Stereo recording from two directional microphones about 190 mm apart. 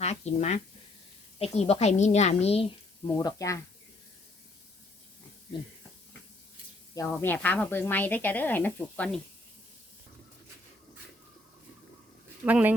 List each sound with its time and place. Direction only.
0.0 s a woman's voice: 35° left (ahead or behind)
3.2 s speech: 15° left (ahead or behind)
6.9 s speech: 10° left (ahead or behind)
12.5 s speech: 10° right (ahead or behind)